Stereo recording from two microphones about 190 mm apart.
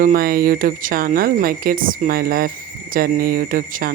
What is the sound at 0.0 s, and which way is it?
Speech, 50° right (ahead or behind).